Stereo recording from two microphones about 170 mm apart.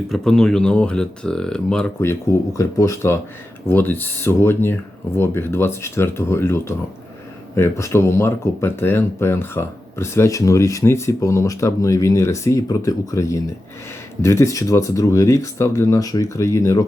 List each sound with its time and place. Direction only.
0.1 s speech: centre (ahead or behind)
2.0 s speech: 15° left (ahead or behind)